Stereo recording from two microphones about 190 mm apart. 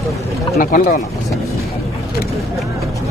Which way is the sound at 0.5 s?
45° left (ahead or behind).